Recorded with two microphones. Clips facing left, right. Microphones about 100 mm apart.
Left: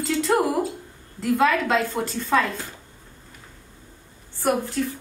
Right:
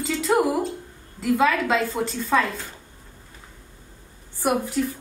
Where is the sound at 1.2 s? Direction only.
Centre (ahead or behind).